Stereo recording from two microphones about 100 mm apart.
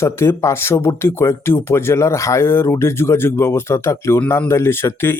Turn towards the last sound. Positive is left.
turn(degrees=25)  # may be behind; listen again after turning